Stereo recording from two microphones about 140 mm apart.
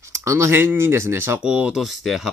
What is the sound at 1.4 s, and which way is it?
Speech, 5° right (ahead or behind).